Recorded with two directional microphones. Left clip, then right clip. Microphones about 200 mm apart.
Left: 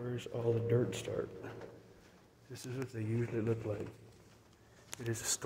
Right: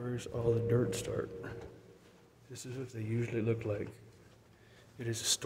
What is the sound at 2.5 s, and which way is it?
Speech, 5° right (ahead or behind).